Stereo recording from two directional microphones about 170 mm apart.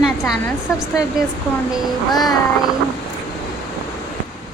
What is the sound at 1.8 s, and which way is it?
Speech, centre (ahead or behind).